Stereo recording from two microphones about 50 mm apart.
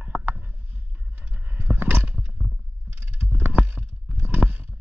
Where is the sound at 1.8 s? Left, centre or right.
Right.